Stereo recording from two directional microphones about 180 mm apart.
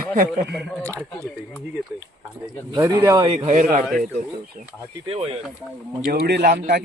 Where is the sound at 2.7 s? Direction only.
10° right (ahead or behind); by 3.8 s 40° right (ahead or behind).